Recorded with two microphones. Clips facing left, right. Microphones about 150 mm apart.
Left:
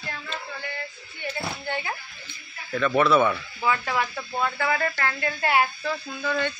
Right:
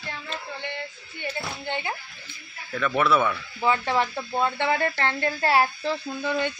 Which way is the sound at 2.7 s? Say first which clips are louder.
Left 2 dB; 5° right (ahead or behind).